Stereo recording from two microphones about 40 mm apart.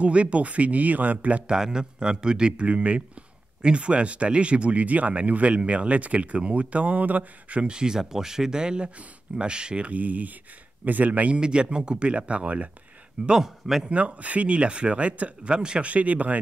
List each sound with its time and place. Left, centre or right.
0.0 s speech: right
1.5 s speech: centre
7.7 s speech: centre
9.8 s speech: right
11.3 s speech: right
13.4 s speech: centre
13.8 s speech: right
15.5 s speech: right
15.9 s speech: right